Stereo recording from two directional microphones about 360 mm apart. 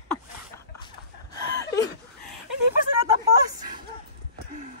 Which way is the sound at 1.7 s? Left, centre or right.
Centre.